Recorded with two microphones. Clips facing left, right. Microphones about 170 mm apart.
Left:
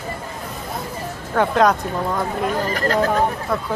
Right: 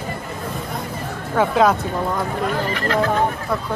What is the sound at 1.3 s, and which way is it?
Speech, 5° right (ahead or behind).